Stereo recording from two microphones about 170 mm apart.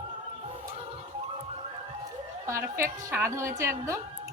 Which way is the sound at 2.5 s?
15° right (ahead or behind).